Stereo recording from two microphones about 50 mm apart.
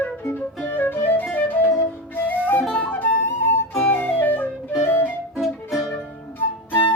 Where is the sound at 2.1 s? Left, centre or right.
Left.